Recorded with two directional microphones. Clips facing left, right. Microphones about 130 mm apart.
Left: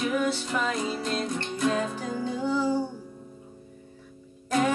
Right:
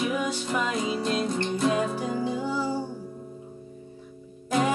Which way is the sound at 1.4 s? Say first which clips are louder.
Right 4 dB; 30° right (ahead or behind).